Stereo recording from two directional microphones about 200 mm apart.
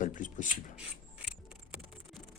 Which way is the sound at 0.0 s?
40° left (ahead or behind).